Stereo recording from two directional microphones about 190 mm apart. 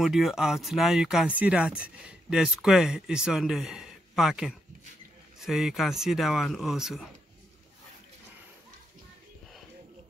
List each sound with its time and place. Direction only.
0.0 s speech: centre (ahead or behind)